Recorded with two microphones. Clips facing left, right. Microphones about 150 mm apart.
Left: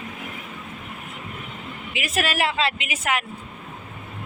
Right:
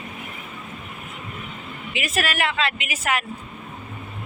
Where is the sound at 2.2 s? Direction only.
30° left (ahead or behind).